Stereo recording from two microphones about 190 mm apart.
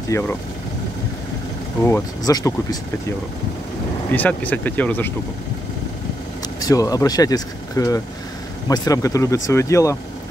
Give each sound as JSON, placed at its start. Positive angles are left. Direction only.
{"t": 0.1, "sound": "speech", "side_deg": 15}
{"t": 1.8, "sound": "speech", "side_deg": 10}
{"t": 4.1, "sound": "speech", "side_deg": 10}
{"t": 6.6, "sound": "speech", "side_deg": 20}